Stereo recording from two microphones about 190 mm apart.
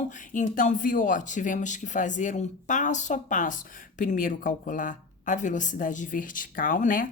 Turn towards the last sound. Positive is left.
turn(degrees=45)  # may be behind; listen again after turning